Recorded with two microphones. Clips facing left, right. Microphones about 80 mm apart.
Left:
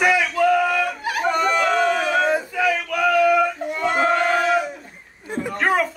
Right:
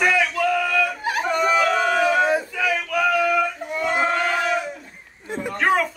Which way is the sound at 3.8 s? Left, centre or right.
Centre.